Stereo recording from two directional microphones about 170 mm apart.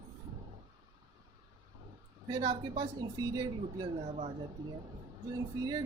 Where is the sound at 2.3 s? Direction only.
25° right (ahead or behind).